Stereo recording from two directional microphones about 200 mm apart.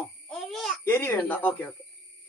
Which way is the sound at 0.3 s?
Centre (ahead or behind).